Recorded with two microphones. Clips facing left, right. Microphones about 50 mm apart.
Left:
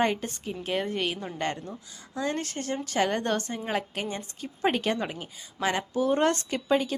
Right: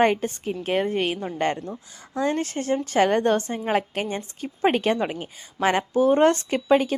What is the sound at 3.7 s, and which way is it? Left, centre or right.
A woman's voice, right.